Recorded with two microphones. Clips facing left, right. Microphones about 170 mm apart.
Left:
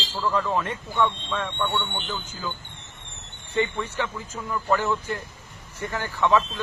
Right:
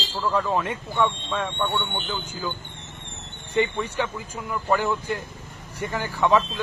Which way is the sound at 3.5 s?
15° right (ahead or behind).